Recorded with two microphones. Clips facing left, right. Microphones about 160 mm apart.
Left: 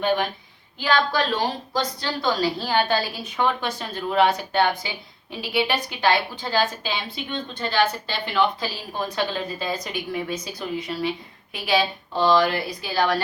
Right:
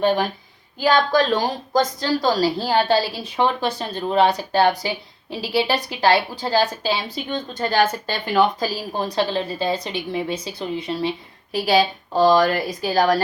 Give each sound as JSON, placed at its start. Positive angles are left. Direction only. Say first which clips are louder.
{"t": 0.0, "sound": "a woman's voice", "louder": "right 3 dB", "side_deg": -35}
{"t": 11.5, "sound": "a woman's voice", "louder": "right 5 dB", "side_deg": -40}